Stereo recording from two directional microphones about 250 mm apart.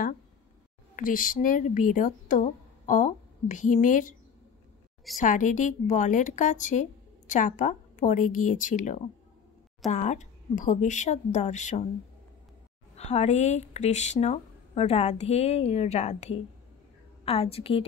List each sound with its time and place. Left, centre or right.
0.9 s speech: left
5.1 s a woman's voice: left
12.9 s a woman's voice: left